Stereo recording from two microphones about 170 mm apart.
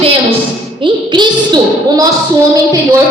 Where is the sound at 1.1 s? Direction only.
25° right (ahead or behind).